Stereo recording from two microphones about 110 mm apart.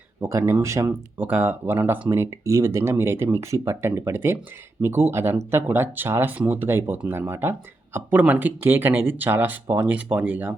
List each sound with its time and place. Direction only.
0.2 s speech: 25° right (ahead or behind)